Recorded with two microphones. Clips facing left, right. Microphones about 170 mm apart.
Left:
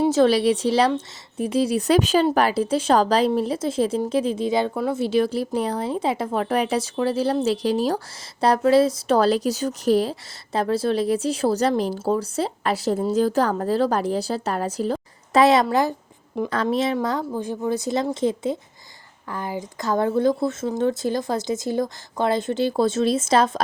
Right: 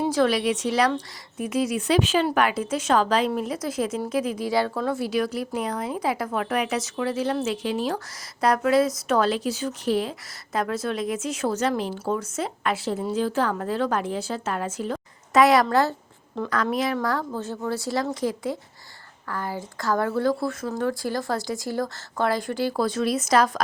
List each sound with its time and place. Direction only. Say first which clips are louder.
0.0 s a woman's voice: left 5 dB; 25° left (ahead or behind)
15.6 s speech: left 1 dB; 15° left (ahead or behind)
16.5 s speech: left 2 dB; 25° left (ahead or behind)